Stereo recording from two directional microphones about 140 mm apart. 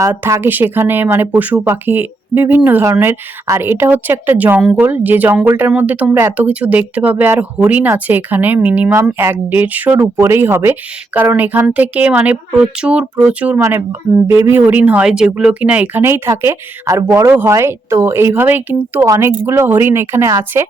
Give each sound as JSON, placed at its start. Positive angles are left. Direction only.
{"t": 0.0, "sound": "speech", "side_deg": -20}